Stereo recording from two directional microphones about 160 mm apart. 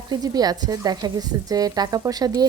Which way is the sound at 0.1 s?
25° right (ahead or behind).